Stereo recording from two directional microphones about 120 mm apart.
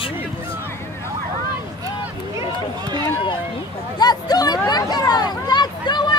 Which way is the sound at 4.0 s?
35° left (ahead or behind).